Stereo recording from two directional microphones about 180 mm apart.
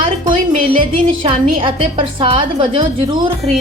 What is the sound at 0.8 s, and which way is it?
A woman's voice, 30° right (ahead or behind).